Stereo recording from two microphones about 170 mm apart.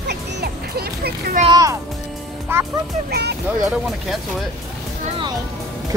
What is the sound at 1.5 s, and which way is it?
Speech, 20° right (ahead or behind).